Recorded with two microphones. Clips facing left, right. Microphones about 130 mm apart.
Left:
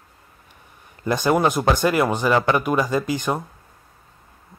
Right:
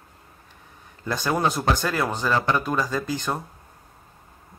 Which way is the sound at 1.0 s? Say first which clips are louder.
Left 5 dB; 20° left (ahead or behind).